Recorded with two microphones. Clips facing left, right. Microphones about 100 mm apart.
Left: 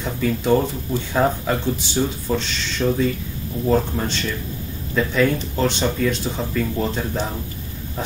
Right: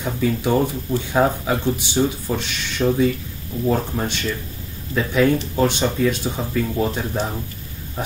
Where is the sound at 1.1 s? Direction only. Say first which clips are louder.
Right 1 dB; 15° right (ahead or behind).